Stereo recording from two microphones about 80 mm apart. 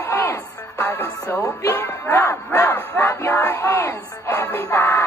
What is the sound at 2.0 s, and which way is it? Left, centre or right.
Music, left.